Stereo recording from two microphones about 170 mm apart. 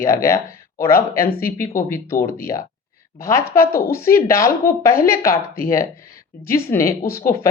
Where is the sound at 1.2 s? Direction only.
60° left (ahead or behind).